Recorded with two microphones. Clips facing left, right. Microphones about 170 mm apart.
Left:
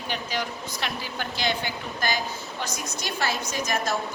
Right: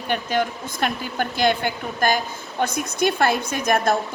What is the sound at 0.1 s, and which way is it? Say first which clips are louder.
Speech: right 8 dB; 55° right (ahead or behind).